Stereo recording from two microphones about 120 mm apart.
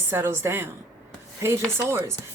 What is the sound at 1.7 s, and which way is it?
Speech, 25° right (ahead or behind).